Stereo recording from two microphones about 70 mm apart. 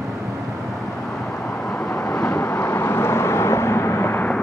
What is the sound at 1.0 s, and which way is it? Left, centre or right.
Vehicle, centre.